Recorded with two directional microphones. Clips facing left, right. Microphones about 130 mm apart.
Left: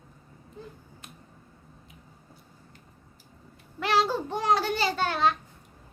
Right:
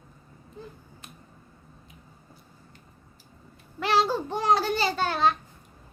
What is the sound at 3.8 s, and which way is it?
Child singing, 30° right (ahead or behind).